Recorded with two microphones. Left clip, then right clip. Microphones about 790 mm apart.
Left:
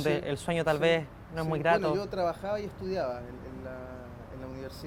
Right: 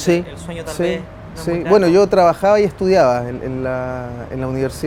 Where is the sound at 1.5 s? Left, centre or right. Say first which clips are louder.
Right 13 dB; right.